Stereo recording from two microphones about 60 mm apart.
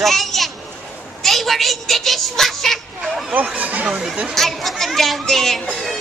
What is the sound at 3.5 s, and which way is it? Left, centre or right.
Speech, right.